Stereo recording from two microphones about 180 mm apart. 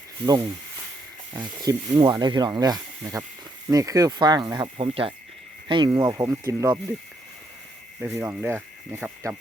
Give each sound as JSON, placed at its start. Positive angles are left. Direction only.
{"t": 0.3, "sound": "speech", "side_deg": -20}
{"t": 8.1, "sound": "speech", "side_deg": -10}